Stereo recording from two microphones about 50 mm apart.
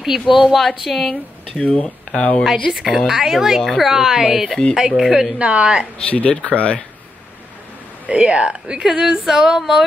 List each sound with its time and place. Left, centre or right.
0.3 s speech: centre
1.6 s speech: left
2.4 s speech: centre
3.1 s female singing: centre
5.4 s speech: right
5.9 s speech: left
8.1 s speech: right
8.8 s female singing: centre